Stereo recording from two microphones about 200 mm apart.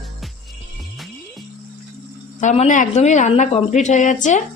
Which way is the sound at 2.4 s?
35° left (ahead or behind).